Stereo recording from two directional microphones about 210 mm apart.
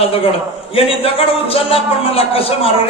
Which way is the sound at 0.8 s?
25° left (ahead or behind).